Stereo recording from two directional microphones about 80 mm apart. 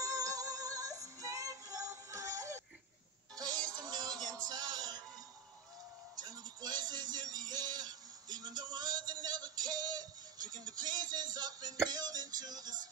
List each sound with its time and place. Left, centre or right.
0.0 s synthetic singing: right
3.7 s music: right
6.2 s a sound: right
9.2 s music: right